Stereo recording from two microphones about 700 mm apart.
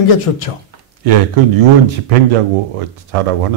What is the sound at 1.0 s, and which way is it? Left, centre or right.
Speech, right.